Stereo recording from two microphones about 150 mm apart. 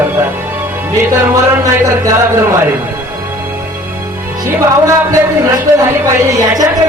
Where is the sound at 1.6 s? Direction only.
25° right (ahead or behind).